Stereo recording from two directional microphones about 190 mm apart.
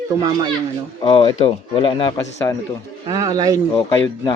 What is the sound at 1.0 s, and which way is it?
Speech, 25° left (ahead or behind).